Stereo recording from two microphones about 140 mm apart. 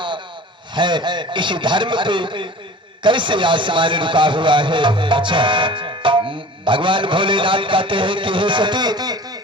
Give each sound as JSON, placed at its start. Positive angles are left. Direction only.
{"t": 0.7, "sound": "a man's voice", "side_deg": -35}